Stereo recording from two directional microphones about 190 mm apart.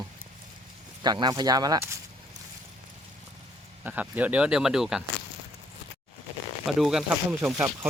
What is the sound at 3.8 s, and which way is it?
Speech, 10° right (ahead or behind).